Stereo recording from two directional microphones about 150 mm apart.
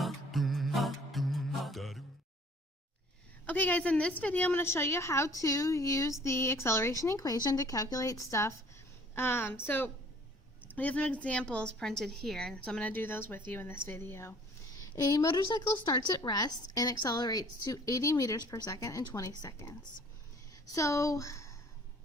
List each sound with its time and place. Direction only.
0.0 s music: centre (ahead or behind)
3.4 s a woman's voice: 10° left (ahead or behind)